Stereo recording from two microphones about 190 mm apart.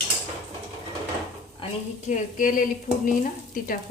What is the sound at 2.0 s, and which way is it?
Stir, 45° left (ahead or behind).